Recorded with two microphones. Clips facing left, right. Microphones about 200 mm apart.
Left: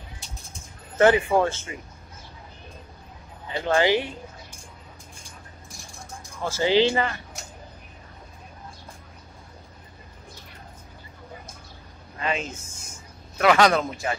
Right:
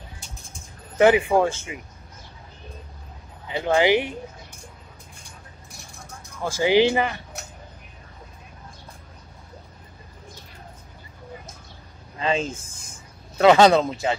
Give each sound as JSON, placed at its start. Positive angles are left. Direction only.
{"t": 0.9, "sound": "speech", "side_deg": -15}
{"t": 3.4, "sound": "speech", "side_deg": -15}
{"t": 6.4, "sound": "speech", "side_deg": -15}
{"t": 12.2, "sound": "speech", "side_deg": -30}